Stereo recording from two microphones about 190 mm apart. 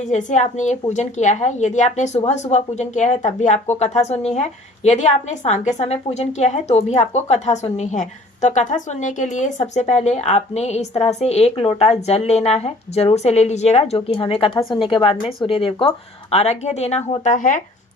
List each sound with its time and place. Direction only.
0.0 s a woman's voice: 40° left (ahead or behind)